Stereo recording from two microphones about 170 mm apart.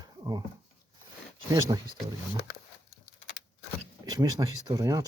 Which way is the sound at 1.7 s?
20° right (ahead or behind).